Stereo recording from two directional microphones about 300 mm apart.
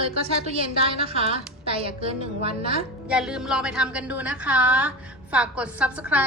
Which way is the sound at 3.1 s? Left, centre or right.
Centre.